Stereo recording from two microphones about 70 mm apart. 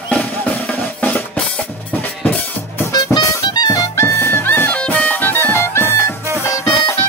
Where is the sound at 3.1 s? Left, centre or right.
Left.